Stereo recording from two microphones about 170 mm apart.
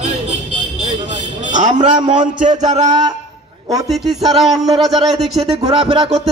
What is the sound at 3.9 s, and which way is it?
A man's voice, centre (ahead or behind).